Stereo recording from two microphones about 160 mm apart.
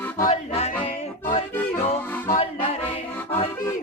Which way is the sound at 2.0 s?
10° left (ahead or behind).